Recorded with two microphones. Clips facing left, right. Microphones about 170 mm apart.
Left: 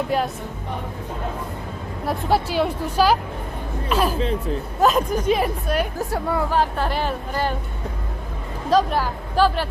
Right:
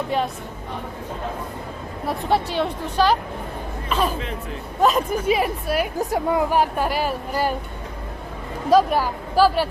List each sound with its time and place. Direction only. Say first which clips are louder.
0.1 s speech: even; centre (ahead or behind)
2.0 s speech: left 1 dB; 5° left (ahead or behind)
4.2 s speech: left 7 dB; 30° left (ahead or behind)
4.8 s speech: even; centre (ahead or behind)
8.7 s speech: right 2 dB; 10° right (ahead or behind)